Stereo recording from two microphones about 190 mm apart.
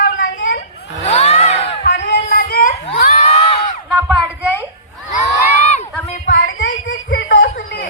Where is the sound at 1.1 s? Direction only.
35° left (ahead or behind).